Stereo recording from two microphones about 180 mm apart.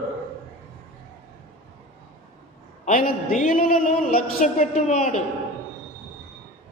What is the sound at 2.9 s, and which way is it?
A man's voice, 50° left (ahead or behind).